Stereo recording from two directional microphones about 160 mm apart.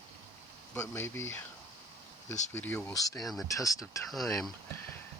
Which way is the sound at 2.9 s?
20° left (ahead or behind).